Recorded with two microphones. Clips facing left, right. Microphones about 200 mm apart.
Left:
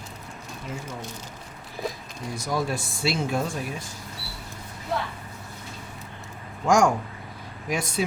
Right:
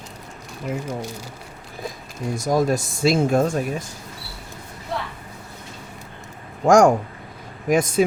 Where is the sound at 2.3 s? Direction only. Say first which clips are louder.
Right 8 dB; 45° right (ahead or behind).